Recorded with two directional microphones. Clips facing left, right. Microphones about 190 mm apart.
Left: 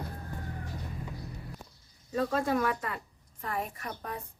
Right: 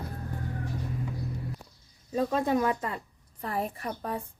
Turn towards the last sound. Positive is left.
turn(degrees=-30)  # may be behind; listen again after turning